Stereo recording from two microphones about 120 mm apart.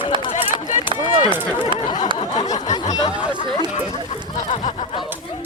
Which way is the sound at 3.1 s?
10° right (ahead or behind).